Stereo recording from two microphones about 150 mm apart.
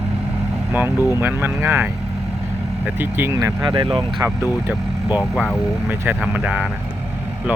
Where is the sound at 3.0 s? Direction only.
15° right (ahead or behind).